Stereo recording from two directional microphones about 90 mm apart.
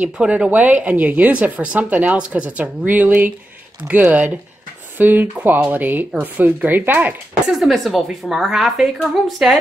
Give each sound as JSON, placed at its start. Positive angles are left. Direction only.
{"t": 0.0, "sound": "a woman's voice", "side_deg": -10}
{"t": 7.5, "sound": "speech", "side_deg": 0}